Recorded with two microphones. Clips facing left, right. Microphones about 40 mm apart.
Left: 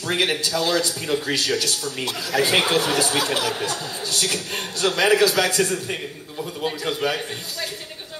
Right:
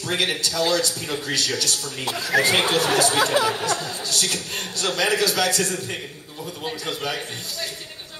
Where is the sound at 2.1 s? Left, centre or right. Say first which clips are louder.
Right 2 dB; right.